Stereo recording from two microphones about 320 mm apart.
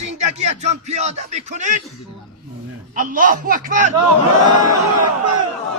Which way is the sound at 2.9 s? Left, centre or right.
Right.